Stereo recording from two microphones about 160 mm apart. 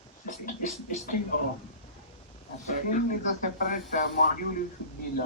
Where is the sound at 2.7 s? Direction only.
55° left (ahead or behind).